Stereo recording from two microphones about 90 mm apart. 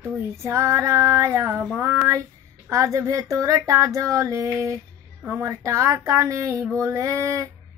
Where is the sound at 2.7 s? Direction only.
35° right (ahead or behind).